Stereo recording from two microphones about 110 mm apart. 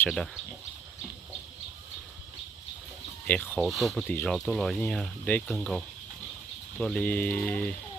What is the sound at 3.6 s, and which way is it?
Speech, centre (ahead or behind).